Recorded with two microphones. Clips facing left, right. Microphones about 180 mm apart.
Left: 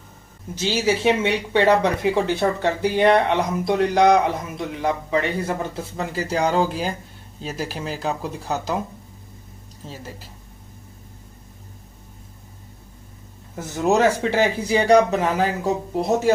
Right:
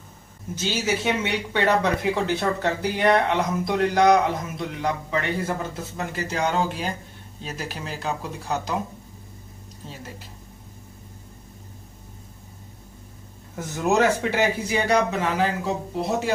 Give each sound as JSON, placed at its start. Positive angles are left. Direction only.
{"t": 0.7, "sound": "speech", "side_deg": 25}
{"t": 6.2, "sound": "speech", "side_deg": 35}
{"t": 13.6, "sound": "a man's voice", "side_deg": 15}
{"t": 14.3, "sound": "speech", "side_deg": 35}